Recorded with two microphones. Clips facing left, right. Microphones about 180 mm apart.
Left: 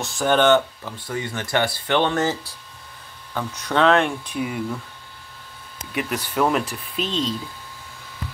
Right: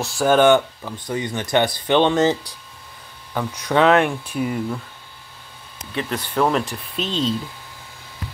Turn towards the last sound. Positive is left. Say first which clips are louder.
# right 2 dB
turn(degrees=0)  # may be behind; listen again after turning